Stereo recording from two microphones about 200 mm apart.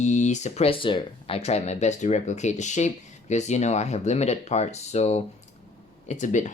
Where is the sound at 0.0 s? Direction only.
35° left (ahead or behind).